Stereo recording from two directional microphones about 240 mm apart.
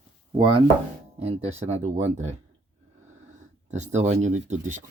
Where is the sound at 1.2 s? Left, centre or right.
Right.